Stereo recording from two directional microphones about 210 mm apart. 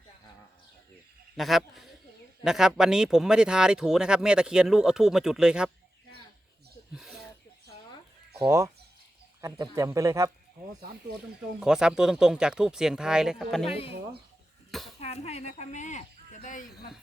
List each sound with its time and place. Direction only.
1.4 s speech: centre (ahead or behind)
6.9 s speech: centre (ahead or behind)
8.4 s a man's voice: 15° right (ahead or behind)
11.6 s speech: 5° right (ahead or behind)
13.7 s speech: 25° left (ahead or behind)
15.0 s speech: 30° left (ahead or behind)